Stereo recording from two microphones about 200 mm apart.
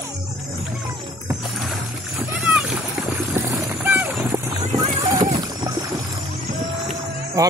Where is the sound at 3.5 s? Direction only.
10° right (ahead or behind).